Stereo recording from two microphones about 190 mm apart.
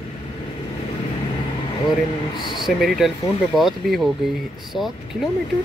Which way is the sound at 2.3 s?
25° left (ahead or behind).